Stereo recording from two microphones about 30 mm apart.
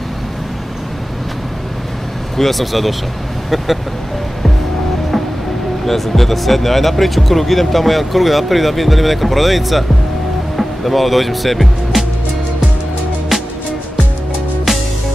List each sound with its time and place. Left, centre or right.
2.3 s speech: centre
5.9 s speech: centre